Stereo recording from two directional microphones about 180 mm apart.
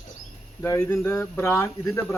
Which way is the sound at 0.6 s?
15° left (ahead or behind).